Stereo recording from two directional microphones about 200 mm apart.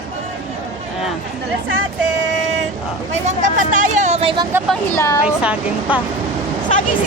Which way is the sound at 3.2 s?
40° right (ahead or behind).